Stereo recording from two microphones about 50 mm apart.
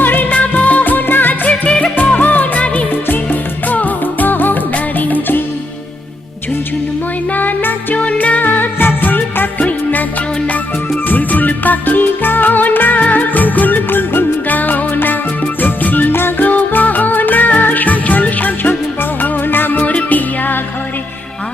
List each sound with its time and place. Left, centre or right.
0.0 s music: left
1.6 s music: left
2.0 s music: left
7.3 s music: left
7.9 s music: left
13.0 s music of bollywood: left
15.6 s music: left
16.5 s music: left